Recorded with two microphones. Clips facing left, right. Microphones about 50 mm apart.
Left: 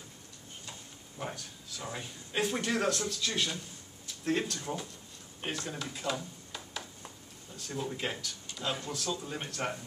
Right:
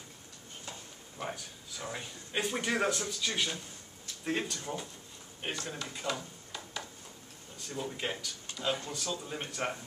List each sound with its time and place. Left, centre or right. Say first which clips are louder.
1.1 s speech: even; centre